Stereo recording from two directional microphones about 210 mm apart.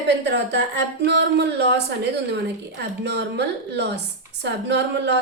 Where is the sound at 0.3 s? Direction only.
55° right (ahead or behind).